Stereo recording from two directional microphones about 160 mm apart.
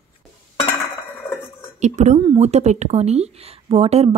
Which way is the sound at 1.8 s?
50° right (ahead or behind).